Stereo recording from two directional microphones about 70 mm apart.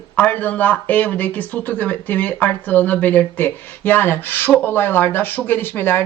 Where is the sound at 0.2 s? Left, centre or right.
Left.